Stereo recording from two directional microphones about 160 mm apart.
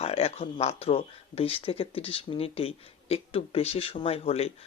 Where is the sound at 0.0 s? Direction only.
40° left (ahead or behind).